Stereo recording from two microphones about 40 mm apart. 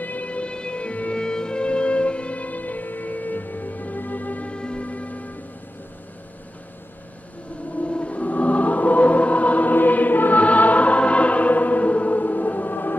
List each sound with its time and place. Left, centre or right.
0.0 s music: left
1.2 s music: centre; by 4.5 s left
4.5 s music: left
4.8 s music: left
7.8 s choir: left